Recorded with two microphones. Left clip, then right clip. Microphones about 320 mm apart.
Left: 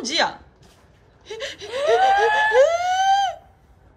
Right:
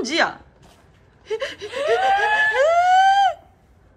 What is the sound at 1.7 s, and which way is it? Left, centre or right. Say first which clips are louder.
Snicker: left 2 dB; left.